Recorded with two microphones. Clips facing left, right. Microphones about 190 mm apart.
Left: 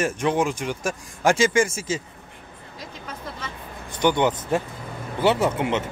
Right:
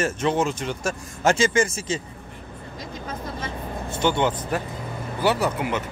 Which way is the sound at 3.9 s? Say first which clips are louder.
Left 2 dB; 15° left (ahead or behind).